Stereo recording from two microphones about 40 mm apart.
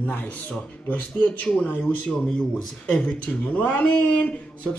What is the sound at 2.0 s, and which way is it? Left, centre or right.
Speech, left.